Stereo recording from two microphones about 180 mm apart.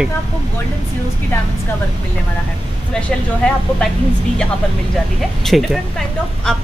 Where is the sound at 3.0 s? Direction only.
5° left (ahead or behind).